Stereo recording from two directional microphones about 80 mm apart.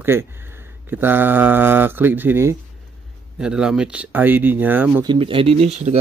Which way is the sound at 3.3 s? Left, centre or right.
Centre.